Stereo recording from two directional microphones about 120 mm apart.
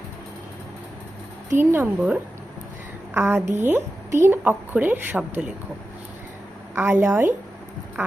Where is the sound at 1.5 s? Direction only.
15° right (ahead or behind).